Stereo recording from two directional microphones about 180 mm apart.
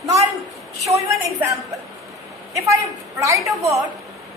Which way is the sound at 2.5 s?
15° right (ahead or behind).